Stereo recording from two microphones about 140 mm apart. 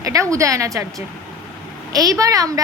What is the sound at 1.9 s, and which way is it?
Speech, 25° right (ahead or behind).